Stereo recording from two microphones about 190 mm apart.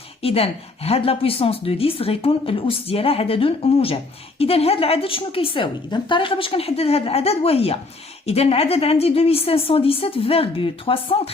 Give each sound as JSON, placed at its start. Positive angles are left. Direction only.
{"t": 0.2, "sound": "a woman's voice", "side_deg": 30}